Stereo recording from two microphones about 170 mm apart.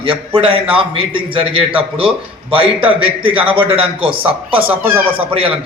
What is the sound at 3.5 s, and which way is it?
Speech, 30° right (ahead or behind).